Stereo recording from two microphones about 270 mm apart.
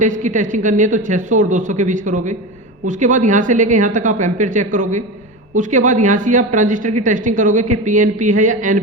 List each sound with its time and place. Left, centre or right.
0.0 s speech: right